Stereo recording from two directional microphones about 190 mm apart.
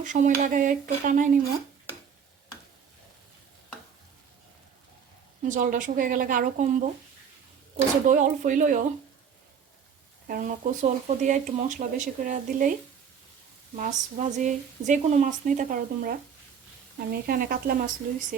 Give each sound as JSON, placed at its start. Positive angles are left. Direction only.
{"t": 0.0, "sound": "speech", "side_deg": -40}
{"t": 5.4, "sound": "speech", "side_deg": -45}
{"t": 8.0, "sound": "speech", "side_deg": -40}
{"t": 10.2, "sound": "speech", "side_deg": -45}
{"t": 13.7, "sound": "speech", "side_deg": -40}